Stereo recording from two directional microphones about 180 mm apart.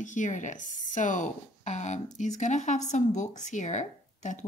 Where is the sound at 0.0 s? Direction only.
45° left (ahead or behind).